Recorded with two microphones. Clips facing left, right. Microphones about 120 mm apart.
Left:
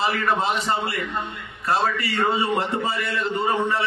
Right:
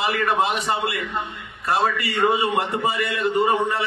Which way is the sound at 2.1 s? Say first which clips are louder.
Right 2 dB; 20° right (ahead or behind).